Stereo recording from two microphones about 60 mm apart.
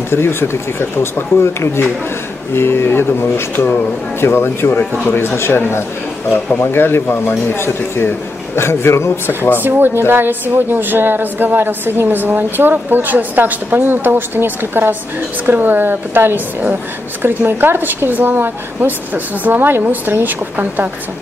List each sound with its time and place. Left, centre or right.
0.1 s speech: left
9.4 s speech: left
9.7 s a woman's voice: right